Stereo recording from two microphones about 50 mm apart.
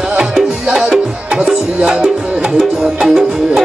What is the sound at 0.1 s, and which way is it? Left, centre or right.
Music, centre.